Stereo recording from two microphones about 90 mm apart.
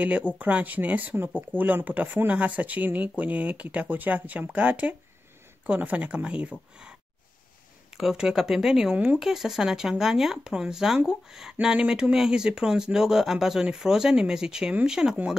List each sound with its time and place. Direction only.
0.0 s speech: 15° right (ahead or behind)
8.0 s speech: 5° right (ahead or behind)
8.9 s speech: 15° right (ahead or behind)
9.2 s speech: 5° right (ahead or behind)